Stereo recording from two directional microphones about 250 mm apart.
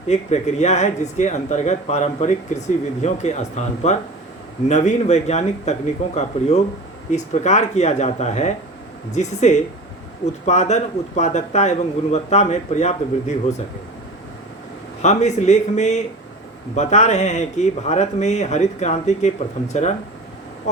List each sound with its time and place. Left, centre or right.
0.1 s speech: left
7.4 s speech: left
15.0 s speech: left